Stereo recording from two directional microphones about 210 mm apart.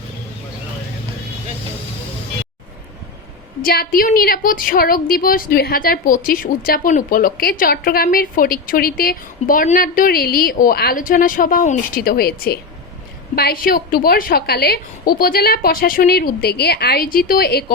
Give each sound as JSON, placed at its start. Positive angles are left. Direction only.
{"t": 3.6, "sound": "a woman's voice", "side_deg": 45}